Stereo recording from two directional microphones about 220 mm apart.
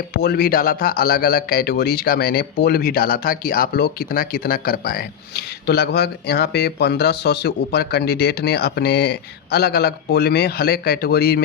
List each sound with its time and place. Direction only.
0.1 s speech: 45° left (ahead or behind)